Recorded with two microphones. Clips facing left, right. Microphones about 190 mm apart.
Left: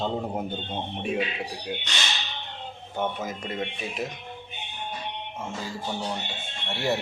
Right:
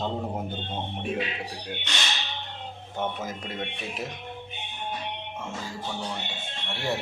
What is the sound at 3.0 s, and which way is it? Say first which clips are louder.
Speech: left 2 dB; centre (ahead or behind).